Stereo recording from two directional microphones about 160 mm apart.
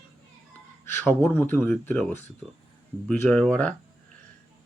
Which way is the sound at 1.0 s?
15° left (ahead or behind).